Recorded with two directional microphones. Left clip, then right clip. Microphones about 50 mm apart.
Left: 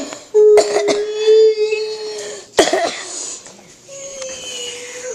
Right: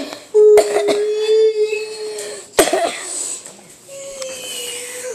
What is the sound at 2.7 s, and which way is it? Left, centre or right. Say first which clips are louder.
Cough: even; left.